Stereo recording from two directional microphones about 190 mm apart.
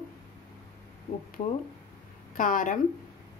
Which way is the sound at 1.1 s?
35° left (ahead or behind).